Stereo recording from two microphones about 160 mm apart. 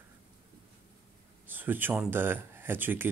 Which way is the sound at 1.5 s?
10° right (ahead or behind).